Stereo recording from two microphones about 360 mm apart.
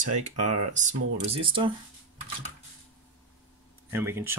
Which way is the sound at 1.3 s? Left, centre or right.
Centre.